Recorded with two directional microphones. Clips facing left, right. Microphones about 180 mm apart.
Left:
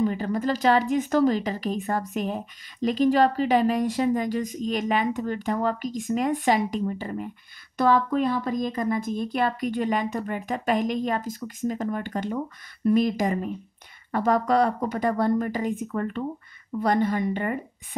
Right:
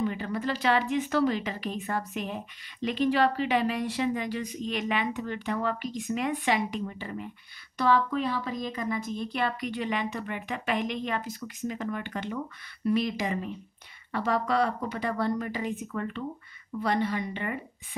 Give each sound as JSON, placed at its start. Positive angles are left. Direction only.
{"t": 0.0, "sound": "speech", "side_deg": 40}